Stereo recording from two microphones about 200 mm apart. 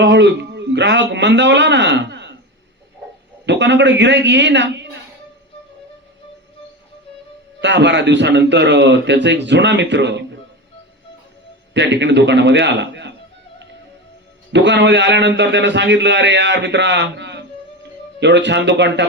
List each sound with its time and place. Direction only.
0.0 s a man's voice: 60° right (ahead or behind)
3.4 s a man's voice: 60° right (ahead or behind)
7.6 s a man's voice: 60° right (ahead or behind)
11.7 s a man's voice: 60° right (ahead or behind)
14.5 s a man's voice: 60° right (ahead or behind)